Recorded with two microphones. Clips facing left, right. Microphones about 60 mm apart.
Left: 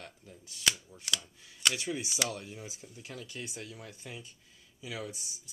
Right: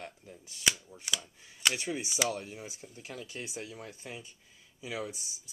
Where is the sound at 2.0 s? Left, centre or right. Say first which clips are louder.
Right 3 dB; centre.